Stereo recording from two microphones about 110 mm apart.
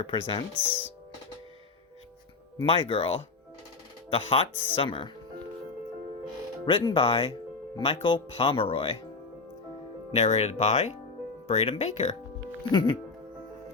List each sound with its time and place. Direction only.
0.0 s speech: 55° left (ahead or behind)
2.6 s speech: 55° left (ahead or behind)
6.7 s speech: 50° left (ahead or behind)
10.1 s speech: 85° left
11.4 s speech: 70° left (ahead or behind)
12.7 s speech: 40° left (ahead or behind)